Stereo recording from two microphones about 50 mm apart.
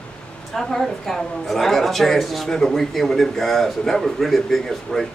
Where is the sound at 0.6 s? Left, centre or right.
Centre.